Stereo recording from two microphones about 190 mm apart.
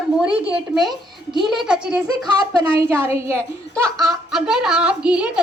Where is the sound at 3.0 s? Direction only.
15° right (ahead or behind).